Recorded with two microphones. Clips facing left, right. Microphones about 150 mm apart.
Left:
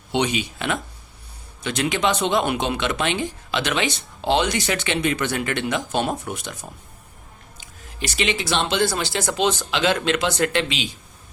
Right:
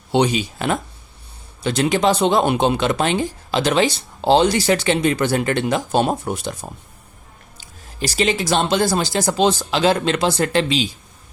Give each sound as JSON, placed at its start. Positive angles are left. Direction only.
{"t": 0.1, "sound": "speech", "side_deg": -35}